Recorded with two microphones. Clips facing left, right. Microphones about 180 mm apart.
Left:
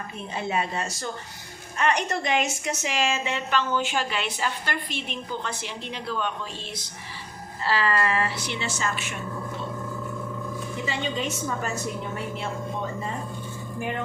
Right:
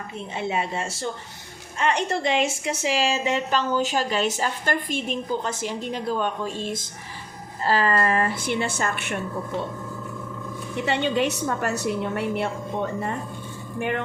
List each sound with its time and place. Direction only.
0.3 s a woman's voice: 25° right (ahead or behind); by 9.1 s 60° right (ahead or behind)
10.8 s a woman's voice: 65° right (ahead or behind)
13.7 s speech: 65° right (ahead or behind)